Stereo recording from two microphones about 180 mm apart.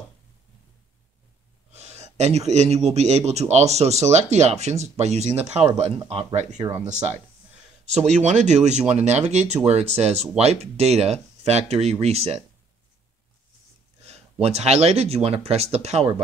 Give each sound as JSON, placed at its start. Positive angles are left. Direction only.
{"t": 1.7, "sound": "a man's voice", "side_deg": -35}
{"t": 8.2, "sound": "a man's voice", "side_deg": -40}
{"t": 14.0, "sound": "a man's voice", "side_deg": -35}